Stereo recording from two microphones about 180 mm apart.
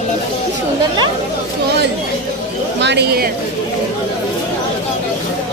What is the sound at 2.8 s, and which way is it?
Speech, 70° right (ahead or behind).